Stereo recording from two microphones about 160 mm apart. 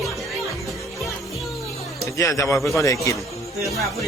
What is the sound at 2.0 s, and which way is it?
A man's voice, 20° left (ahead or behind).